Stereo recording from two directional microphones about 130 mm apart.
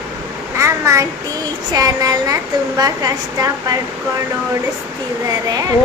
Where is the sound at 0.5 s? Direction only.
25° right (ahead or behind).